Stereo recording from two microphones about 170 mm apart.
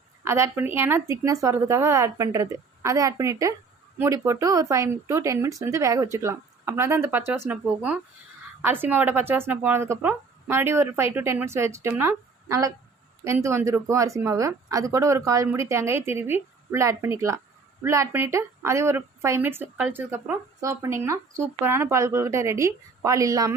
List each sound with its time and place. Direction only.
0.3 s speech: 15° right (ahead or behind)